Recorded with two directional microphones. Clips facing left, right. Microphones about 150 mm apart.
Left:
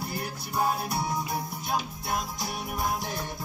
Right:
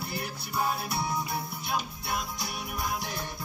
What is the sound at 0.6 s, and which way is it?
Music, 45° left (ahead or behind).